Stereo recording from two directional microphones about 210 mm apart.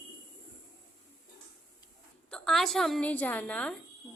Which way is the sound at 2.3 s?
5° left (ahead or behind).